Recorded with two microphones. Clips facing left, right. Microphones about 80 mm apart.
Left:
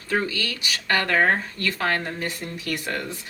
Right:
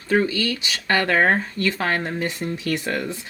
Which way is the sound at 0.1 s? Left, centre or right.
Right.